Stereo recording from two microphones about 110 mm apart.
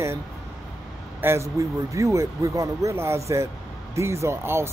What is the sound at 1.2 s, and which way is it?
Speech, 25° right (ahead or behind).